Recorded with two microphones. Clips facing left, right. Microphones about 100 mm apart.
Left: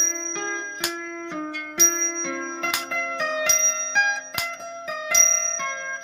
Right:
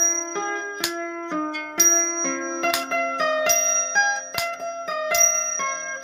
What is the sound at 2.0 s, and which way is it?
Music, 10° right (ahead or behind).